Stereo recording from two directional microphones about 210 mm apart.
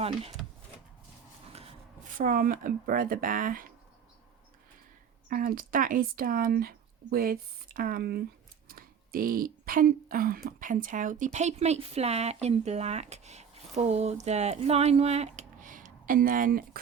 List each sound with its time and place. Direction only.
2.1 s speech: 40° right (ahead or behind)
5.3 s speech: 45° right (ahead or behind)